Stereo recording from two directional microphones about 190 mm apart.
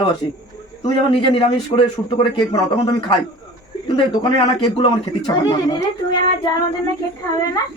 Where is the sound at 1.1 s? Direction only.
30° left (ahead or behind).